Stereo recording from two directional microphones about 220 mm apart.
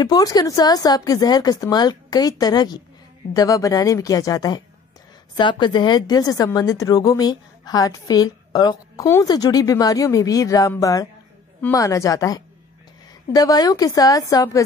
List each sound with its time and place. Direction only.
0.0 s speech: 15° left (ahead or behind)